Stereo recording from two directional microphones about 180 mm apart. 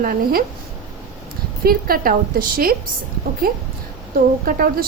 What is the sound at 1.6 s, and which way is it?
A woman's voice, 55° right (ahead or behind).